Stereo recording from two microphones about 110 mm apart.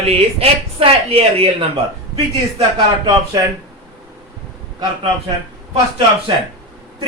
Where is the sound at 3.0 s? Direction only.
30° right (ahead or behind).